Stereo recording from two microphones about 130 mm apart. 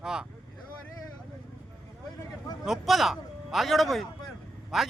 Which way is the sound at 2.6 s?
Centre (ahead or behind).